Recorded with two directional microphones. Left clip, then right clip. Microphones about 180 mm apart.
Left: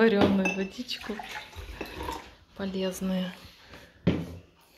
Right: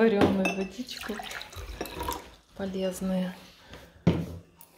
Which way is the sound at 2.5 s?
Centre (ahead or behind).